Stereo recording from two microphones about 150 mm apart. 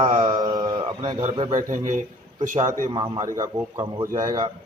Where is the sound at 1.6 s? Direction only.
60° right (ahead or behind).